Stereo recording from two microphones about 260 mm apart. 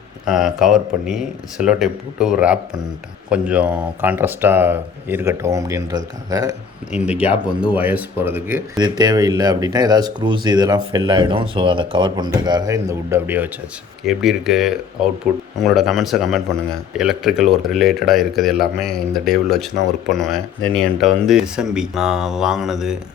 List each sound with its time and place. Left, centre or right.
0.3 s speech: centre